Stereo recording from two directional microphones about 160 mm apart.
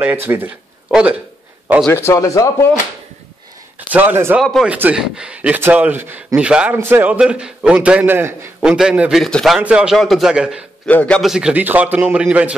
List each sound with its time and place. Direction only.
0.0 s speech: 15° right (ahead or behind)
1.9 s speech: 15° left (ahead or behind)
3.9 s speech: 10° right (ahead or behind)
4.4 s a man's voice: centre (ahead or behind)
10.9 s speech: 10° left (ahead or behind); by 12.5 s 10° right (ahead or behind)